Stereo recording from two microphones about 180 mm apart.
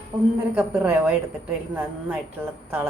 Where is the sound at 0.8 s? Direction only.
10° right (ahead or behind).